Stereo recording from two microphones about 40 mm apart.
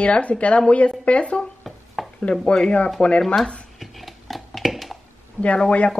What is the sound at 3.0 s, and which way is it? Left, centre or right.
Speech, left.